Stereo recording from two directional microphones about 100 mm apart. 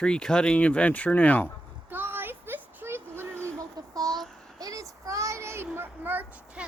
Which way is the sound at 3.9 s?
40° right (ahead or behind).